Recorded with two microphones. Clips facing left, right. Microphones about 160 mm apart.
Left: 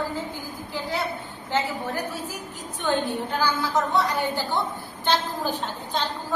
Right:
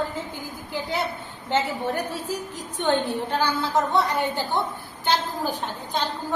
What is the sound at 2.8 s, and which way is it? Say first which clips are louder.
A woman's voice: right 2 dB; 30° right (ahead or behind).